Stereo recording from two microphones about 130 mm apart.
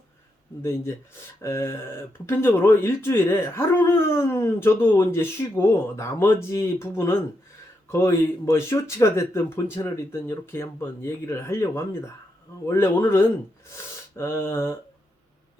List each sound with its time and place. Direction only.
0.6 s speech: 20° left (ahead or behind)
13.7 s gasp: 20° left (ahead or behind)